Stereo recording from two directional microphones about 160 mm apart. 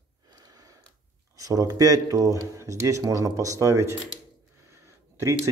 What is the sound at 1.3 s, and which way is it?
Speech, 20° right (ahead or behind).